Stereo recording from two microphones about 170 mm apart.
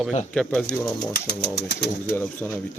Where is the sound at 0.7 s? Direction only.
75° left (ahead or behind).